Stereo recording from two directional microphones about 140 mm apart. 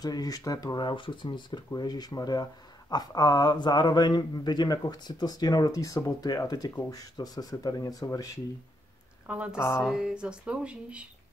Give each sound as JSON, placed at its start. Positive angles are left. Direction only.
{"t": 0.0, "sound": "speech", "side_deg": 25}
{"t": 9.3, "sound": "speech", "side_deg": -10}